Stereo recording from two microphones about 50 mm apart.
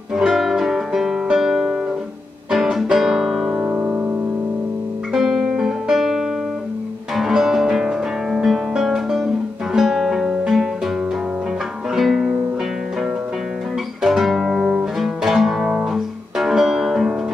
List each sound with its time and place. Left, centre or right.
0.1 s music: centre
3.5 s music: right
5.1 s music: centre
8.5 s guitar: centre
9.8 s music: centre
11.9 s music: centre
14.0 s guitar: centre
15.0 s music: centre